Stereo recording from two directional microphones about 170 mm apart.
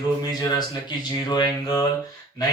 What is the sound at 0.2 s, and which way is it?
Speech, 25° left (ahead or behind).